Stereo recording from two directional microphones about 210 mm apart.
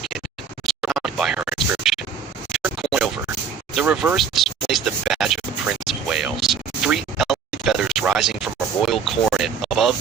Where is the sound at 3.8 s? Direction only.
Centre (ahead or behind).